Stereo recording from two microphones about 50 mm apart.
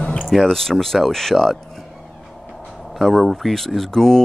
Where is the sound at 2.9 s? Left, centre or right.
Centre.